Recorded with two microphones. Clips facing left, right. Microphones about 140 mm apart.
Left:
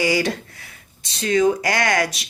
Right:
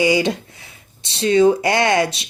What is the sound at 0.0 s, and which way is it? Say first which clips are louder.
Speech: right 4 dB; 20° right (ahead or behind).